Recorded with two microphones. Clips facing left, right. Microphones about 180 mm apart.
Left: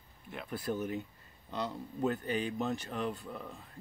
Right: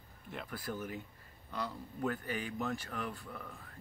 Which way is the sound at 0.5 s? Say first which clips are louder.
Left 7 dB; 25° left (ahead or behind).